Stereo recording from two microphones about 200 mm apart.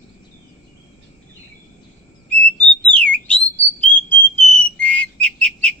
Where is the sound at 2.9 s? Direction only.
5° left (ahead or behind).